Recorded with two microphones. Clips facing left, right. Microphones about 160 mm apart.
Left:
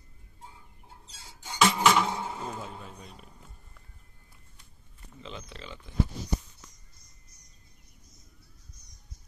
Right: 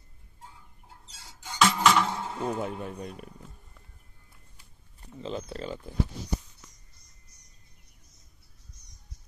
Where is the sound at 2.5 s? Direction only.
60° right (ahead or behind).